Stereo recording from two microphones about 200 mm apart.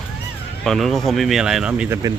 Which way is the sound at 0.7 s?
Centre (ahead or behind).